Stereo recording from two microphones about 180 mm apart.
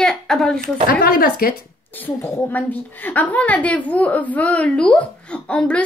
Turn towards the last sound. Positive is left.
turn(degrees=5)  # may be behind; listen again after turning